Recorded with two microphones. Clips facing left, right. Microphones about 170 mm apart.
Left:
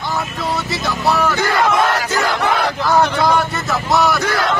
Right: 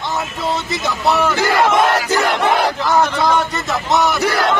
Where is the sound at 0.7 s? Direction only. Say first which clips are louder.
Even; 20° right (ahead or behind).